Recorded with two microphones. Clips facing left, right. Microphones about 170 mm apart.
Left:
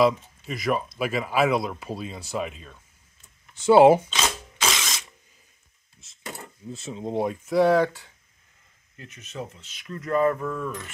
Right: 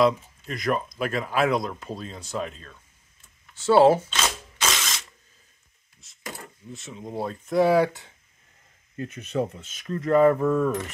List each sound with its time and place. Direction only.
0.0 s speech: 5° left (ahead or behind)
3.5 s mechanisms: 15° left (ahead or behind)
5.9 s a sound: 25° left (ahead or behind)
7.4 s speech: centre (ahead or behind)
8.9 s speech: 50° right (ahead or behind)
9.9 s a sound: 25° right (ahead or behind)